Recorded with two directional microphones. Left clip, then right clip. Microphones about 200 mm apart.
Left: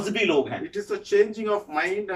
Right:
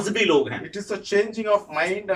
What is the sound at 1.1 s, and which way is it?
Speech, 5° right (ahead or behind).